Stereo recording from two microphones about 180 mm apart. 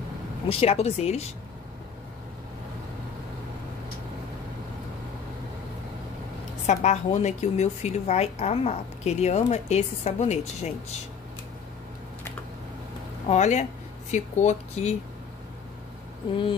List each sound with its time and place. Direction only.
0.5 s speech: 35° left (ahead or behind)
6.6 s speech: 40° left (ahead or behind)
13.3 s speech: 40° left (ahead or behind)